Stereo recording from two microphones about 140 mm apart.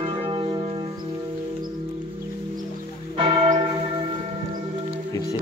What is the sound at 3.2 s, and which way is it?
Church bell, 35° right (ahead or behind).